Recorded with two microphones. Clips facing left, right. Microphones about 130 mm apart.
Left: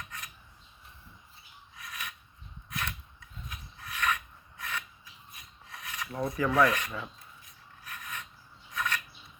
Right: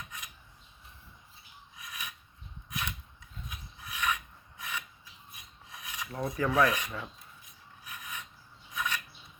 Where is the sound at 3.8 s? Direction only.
10° right (ahead or behind).